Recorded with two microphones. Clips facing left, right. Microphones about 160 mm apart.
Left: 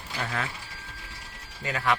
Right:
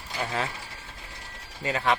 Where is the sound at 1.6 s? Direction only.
25° right (ahead or behind).